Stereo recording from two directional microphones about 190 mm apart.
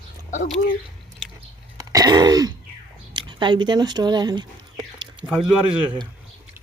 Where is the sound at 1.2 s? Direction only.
5° right (ahead or behind).